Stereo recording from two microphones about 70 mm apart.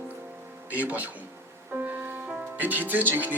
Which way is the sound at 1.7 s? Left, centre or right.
Right.